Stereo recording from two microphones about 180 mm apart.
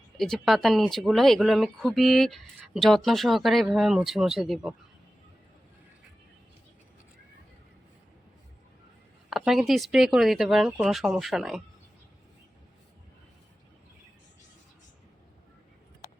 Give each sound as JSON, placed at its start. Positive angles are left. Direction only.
{"t": 0.2, "sound": "speech", "side_deg": 0}
{"t": 9.3, "sound": "speech", "side_deg": 0}